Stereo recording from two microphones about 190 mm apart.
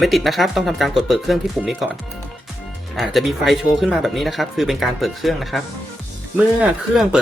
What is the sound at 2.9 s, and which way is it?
Speech, centre (ahead or behind).